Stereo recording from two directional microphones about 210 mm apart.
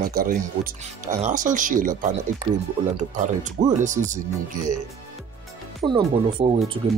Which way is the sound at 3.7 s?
35° right (ahead or behind).